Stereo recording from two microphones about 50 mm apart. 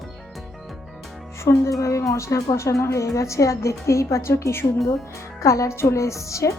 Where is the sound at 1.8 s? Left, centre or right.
Left.